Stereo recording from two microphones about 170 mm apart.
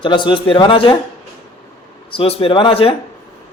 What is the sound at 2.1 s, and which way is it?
Speech, 35° left (ahead or behind).